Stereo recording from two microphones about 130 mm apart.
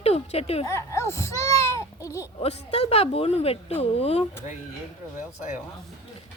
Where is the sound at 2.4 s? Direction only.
55° left (ahead or behind).